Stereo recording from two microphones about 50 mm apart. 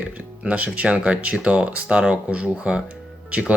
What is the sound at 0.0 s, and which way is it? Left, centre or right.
Speech, right.